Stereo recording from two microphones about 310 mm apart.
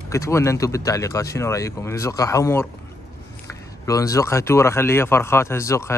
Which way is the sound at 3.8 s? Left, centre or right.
Centre.